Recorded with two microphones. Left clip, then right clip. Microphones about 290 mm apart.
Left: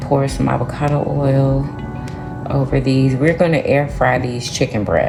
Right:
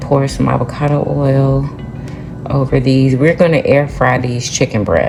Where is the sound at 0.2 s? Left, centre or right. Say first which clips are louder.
Right 3 dB; right.